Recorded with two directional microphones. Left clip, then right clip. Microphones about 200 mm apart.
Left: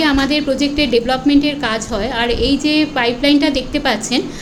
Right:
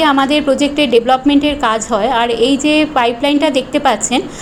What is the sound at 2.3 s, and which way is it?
Speech, 30° left (ahead or behind).